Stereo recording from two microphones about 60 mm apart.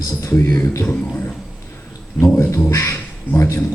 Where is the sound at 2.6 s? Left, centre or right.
Left.